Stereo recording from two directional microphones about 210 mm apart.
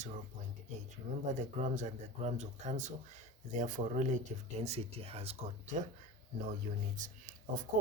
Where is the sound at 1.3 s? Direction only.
35° right (ahead or behind).